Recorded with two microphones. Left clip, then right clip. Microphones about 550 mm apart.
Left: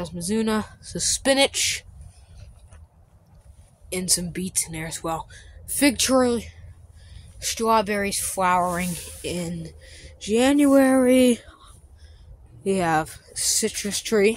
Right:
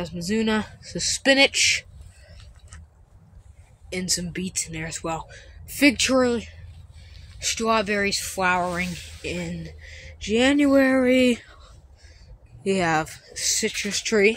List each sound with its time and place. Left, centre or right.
0.0 s speech: left
3.9 s speech: left
12.6 s speech: left